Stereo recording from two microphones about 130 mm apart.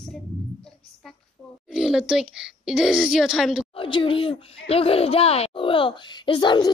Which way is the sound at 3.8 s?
40° left (ahead or behind).